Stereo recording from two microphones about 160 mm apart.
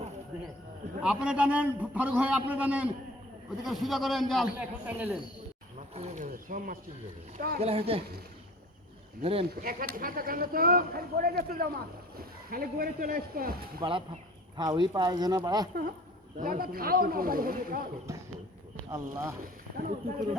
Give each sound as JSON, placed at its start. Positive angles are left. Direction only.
{"t": 1.0, "sound": "a man's voice", "side_deg": -5}
{"t": 4.9, "sound": "a man's voice", "side_deg": -10}
{"t": 5.9, "sound": "speech", "side_deg": -45}
{"t": 7.6, "sound": "speech", "side_deg": -40}
{"t": 9.2, "sound": "speech", "side_deg": -35}
{"t": 9.6, "sound": "speech", "side_deg": -65}
{"t": 14.5, "sound": "speech", "side_deg": -25}
{"t": 16.4, "sound": "speech", "side_deg": -65}
{"t": 18.8, "sound": "speech", "side_deg": -20}
{"t": 19.4, "sound": "speech", "side_deg": -60}